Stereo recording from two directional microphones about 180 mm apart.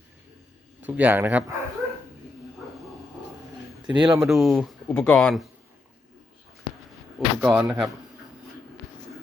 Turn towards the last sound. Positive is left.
turn(degrees=-5)  # may be behind; listen again after turning